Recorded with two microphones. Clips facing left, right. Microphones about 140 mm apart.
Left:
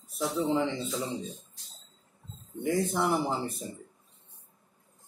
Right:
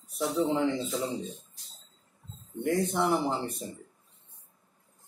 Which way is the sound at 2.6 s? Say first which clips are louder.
Right 1 dB; centre (ahead or behind).